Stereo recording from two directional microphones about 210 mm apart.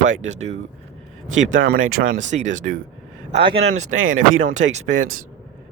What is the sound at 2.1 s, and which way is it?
Speech, 35° right (ahead or behind).